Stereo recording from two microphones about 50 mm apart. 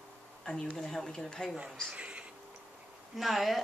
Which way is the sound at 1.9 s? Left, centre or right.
Right.